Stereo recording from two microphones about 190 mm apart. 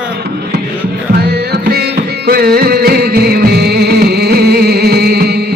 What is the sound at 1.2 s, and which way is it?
Music, 55° right (ahead or behind).